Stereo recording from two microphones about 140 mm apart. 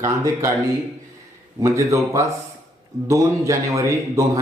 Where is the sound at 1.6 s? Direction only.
20° right (ahead or behind).